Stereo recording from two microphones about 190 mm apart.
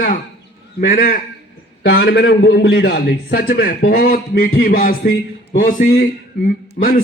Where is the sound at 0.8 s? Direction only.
50° left (ahead or behind).